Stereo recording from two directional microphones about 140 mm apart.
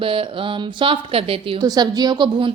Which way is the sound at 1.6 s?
30° right (ahead or behind).